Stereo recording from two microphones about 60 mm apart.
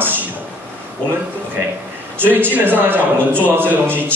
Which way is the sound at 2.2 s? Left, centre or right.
Right.